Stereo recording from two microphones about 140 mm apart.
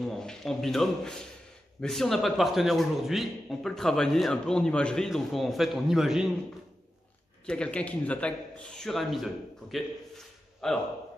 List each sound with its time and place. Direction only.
0.0 s a man's voice: 5° left (ahead or behind)
7.4 s a man's voice: 5° left (ahead or behind)